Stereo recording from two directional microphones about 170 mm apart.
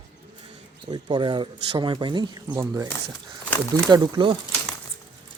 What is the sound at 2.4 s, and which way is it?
Speech, 15° right (ahead or behind).